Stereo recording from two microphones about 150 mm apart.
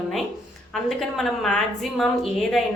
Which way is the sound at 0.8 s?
Centre (ahead or behind).